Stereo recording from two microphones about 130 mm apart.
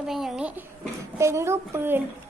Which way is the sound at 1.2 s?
20° right (ahead or behind).